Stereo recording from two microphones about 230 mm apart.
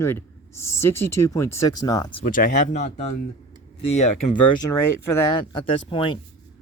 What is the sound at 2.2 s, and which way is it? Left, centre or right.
Speech, left.